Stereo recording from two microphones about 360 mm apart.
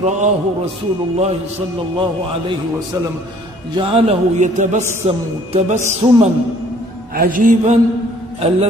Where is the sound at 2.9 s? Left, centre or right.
Centre.